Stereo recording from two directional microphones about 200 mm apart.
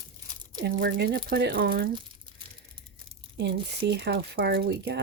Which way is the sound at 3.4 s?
55° right (ahead or behind).